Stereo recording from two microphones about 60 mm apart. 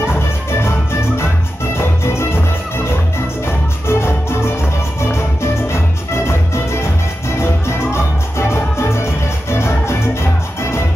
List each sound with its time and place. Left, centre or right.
0.0 s music: left